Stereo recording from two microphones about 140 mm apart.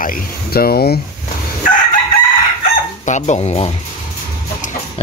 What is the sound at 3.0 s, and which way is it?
Speech, 55° left (ahead or behind).